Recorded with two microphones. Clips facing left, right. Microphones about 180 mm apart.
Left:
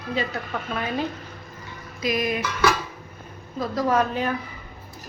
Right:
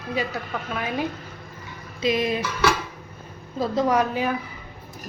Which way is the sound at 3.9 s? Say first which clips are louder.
Even; 10° right (ahead or behind).